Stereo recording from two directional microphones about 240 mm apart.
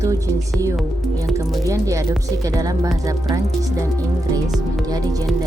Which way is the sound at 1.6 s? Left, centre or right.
Centre.